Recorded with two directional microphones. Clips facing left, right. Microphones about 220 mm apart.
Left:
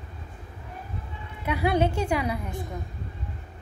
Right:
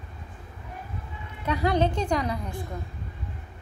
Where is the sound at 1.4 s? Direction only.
10° left (ahead or behind).